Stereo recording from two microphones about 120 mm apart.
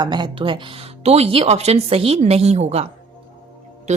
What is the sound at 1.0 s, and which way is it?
A woman's voice, 60° right (ahead or behind).